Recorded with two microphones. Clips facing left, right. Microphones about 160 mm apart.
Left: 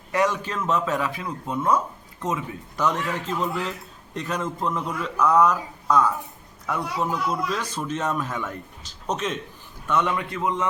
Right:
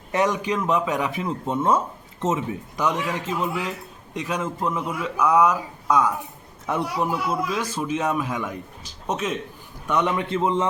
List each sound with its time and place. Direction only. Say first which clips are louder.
0.1 s speech: right 2 dB; 20° right (ahead or behind)
2.7 s a man's voice: even; 10° right (ahead or behind); by 10.7 s 25° right (ahead or behind)